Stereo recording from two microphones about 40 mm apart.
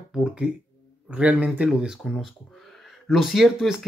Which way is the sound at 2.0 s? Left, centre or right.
Centre.